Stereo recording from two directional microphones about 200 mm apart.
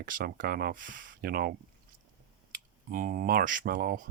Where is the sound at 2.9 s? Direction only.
45° right (ahead or behind).